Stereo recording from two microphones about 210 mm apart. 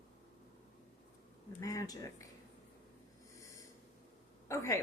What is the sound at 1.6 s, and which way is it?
Speech, 15° left (ahead or behind).